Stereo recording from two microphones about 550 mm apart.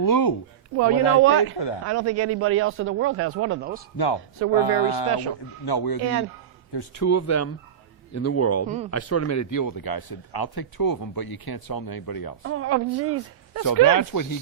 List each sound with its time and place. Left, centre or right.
0.0 s a man's voice: left
1.2 s a man's voice: right
1.5 s speech: left
1.8 s a man's voice: right
4.5 s a man's voice: left
6.0 s a man's voice: right
7.0 s speech: left
8.6 s speech: centre
8.9 s a man's voice: left
12.4 s a man's voice: right
13.7 s a man's voice: left